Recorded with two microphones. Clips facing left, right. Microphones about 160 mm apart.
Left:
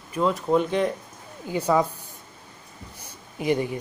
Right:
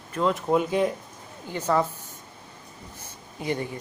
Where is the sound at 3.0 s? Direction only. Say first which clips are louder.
Left 5 dB; 15° left (ahead or behind).